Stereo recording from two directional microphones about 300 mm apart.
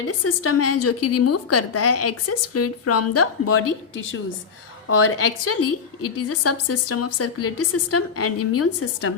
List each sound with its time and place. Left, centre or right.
0.3 s a woman's voice: left
4.9 s a woman's voice: left